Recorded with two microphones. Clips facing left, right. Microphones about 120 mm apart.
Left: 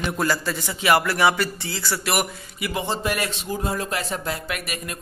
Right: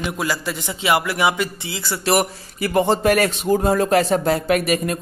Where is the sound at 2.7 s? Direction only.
50° right (ahead or behind).